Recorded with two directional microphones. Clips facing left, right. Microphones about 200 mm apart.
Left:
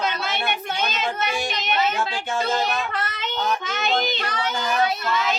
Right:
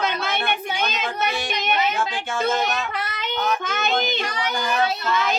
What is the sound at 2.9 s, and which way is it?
Child singing, 10° right (ahead or behind).